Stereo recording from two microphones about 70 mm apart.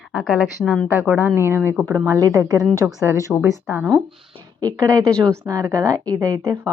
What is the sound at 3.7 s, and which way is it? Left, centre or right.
Speech, right.